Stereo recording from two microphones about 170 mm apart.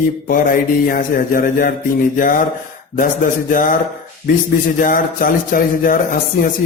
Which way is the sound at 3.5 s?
50° left (ahead or behind).